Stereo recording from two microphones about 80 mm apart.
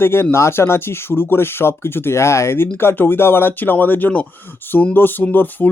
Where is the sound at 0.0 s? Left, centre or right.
Left.